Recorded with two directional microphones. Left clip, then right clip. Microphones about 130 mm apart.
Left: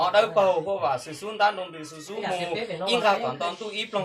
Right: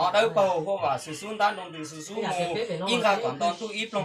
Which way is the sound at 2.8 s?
25° left (ahead or behind).